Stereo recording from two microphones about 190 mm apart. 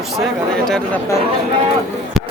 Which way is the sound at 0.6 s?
5° left (ahead or behind).